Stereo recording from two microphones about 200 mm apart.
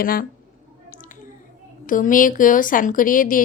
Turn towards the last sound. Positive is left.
turn(degrees=45)  # may be behind; listen again after turning